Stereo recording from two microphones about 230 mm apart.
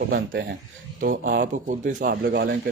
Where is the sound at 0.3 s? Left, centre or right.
Right.